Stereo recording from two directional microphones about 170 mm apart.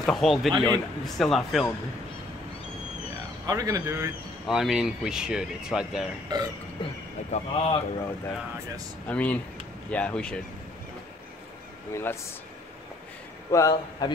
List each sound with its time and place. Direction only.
0.0 s speech: centre (ahead or behind)
3.4 s speech: 20° right (ahead or behind)
4.5 s speech: centre (ahead or behind)
6.3 s speech: 25° right (ahead or behind)
7.2 s a man's voice: 40° left (ahead or behind)
9.0 s speech: 10° left (ahead or behind)
11.9 s speech: 15° left (ahead or behind)
13.5 s a man's voice: 20° left (ahead or behind)